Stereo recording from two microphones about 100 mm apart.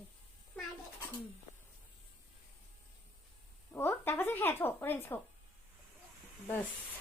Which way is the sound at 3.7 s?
20° left (ahead or behind).